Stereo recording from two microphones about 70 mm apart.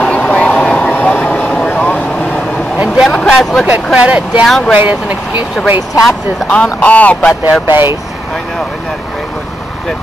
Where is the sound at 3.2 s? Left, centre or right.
Centre.